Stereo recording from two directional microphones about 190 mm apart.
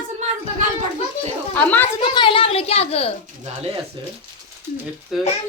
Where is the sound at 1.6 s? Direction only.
10° left (ahead or behind).